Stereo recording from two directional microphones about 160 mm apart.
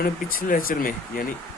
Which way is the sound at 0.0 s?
65° left (ahead or behind).